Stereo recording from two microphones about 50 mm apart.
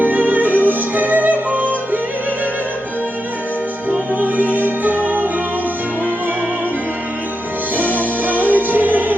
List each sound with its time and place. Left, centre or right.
0.0 s music: right
4.1 s music: right
7.8 s music: right